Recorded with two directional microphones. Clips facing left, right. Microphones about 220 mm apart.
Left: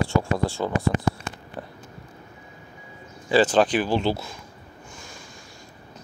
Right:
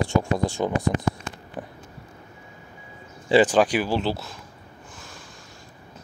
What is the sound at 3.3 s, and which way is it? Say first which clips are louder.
Speech: right 1 dB; 15° right (ahead or behind).